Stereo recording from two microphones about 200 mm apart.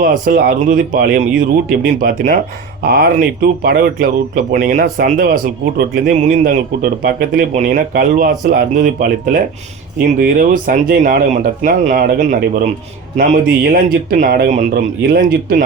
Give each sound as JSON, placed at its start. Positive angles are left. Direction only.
{"t": 0.0, "sound": "speech", "side_deg": -45}